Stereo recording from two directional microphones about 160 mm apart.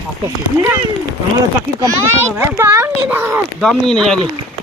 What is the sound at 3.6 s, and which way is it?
Speech, centre (ahead or behind).